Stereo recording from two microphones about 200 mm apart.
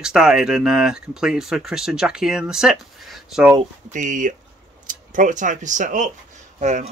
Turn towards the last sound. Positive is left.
turn(degrees=-35)  # may be behind; listen again after turning